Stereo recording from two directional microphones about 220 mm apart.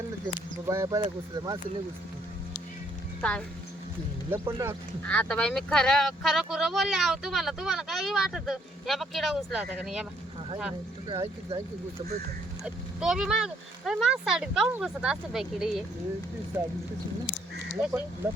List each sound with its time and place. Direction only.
0.3 s speech: 15° right (ahead or behind)
3.2 s speech: 5° left (ahead or behind)
4.4 s speech: 15° right (ahead or behind)
5.0 s speech: 5° left (ahead or behind)
11.1 s speech: 25° right (ahead or behind)
12.6 s speech: 5° right (ahead or behind)
17.7 s speech: 5° right (ahead or behind)